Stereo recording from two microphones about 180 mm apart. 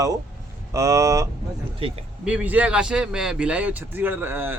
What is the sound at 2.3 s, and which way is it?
Speech, 10° right (ahead or behind).